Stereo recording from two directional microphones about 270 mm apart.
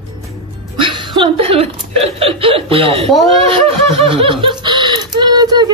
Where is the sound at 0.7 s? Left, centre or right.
Centre.